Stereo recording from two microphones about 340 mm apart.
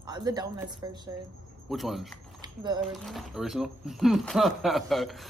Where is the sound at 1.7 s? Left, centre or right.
Centre.